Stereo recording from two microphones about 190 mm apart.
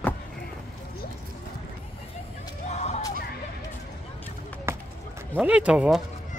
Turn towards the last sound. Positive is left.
turn(degrees=-5)  # may be behind; listen again after turning